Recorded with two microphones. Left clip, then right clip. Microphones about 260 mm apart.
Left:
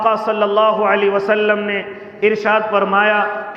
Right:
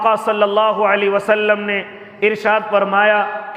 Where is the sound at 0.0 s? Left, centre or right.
Right.